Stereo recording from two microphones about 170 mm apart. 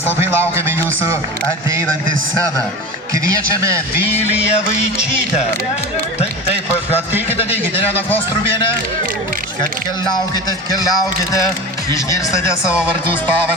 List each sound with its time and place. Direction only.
0.2 s a man's voice: 15° right (ahead or behind)
3.6 s a man's voice: 15° right (ahead or behind)
4.4 s music: 40° left (ahead or behind)